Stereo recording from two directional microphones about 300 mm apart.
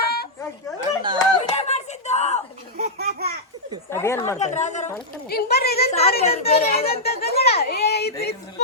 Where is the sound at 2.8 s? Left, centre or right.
Right.